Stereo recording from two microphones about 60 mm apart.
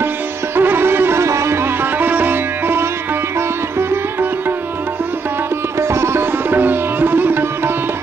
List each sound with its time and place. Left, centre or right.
0.6 s music: right
5.8 s sitar: right